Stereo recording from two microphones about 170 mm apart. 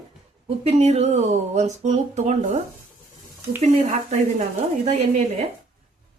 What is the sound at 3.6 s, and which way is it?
Speech, 45° right (ahead or behind).